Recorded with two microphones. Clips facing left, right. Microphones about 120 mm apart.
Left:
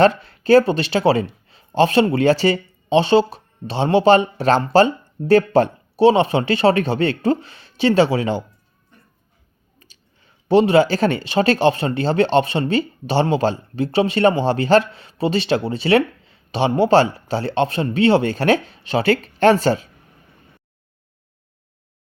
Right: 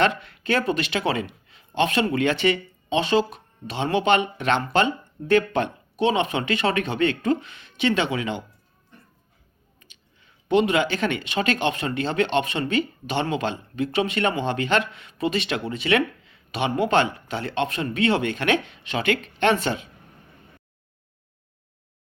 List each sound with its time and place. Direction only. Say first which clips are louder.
0.0 s speech: left 7 dB; 35° left (ahead or behind)
9.8 s speech: left 3 dB; 35° left (ahead or behind)